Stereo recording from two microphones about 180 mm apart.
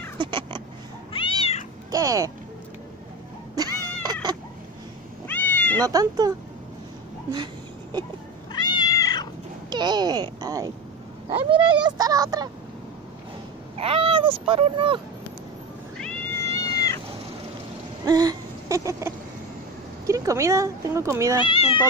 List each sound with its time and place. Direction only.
0.2 s cat: 25° right (ahead or behind)
1.1 s cat: 30° left (ahead or behind)
1.9 s speech: 20° right (ahead or behind)
3.5 s cat: 20° right (ahead or behind)
5.3 s cat: 10° left (ahead or behind)
5.9 s speech: 20° right (ahead or behind)
8.5 s cat: 25° left (ahead or behind)
9.7 s speech: 25° right (ahead or behind)
13.7 s speech: 30° right (ahead or behind)
16.6 s cat: 20° left (ahead or behind)
18.0 s a sound: 20° right (ahead or behind)
20.1 s speech: 15° right (ahead or behind)
21.4 s speech: 30° left (ahead or behind)